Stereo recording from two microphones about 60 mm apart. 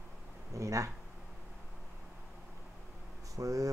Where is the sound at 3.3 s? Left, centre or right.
Right.